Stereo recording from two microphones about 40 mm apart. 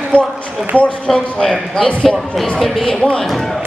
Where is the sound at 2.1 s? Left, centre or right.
Centre.